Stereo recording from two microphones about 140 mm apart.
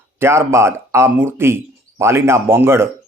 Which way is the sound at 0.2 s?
20° right (ahead or behind).